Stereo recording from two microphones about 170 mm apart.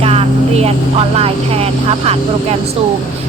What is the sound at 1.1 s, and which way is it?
Speech, 35° right (ahead or behind).